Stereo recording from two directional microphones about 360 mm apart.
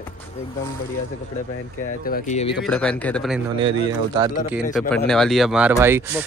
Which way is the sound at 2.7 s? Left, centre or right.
Centre.